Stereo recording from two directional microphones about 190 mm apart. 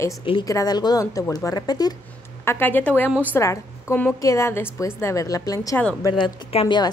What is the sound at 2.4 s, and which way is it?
A woman's voice, 10° left (ahead or behind).